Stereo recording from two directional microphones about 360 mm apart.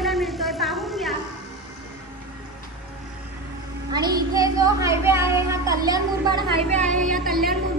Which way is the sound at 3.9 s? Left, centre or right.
Centre.